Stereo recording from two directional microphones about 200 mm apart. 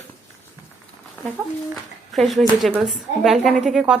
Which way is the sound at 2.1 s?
Centre (ahead or behind).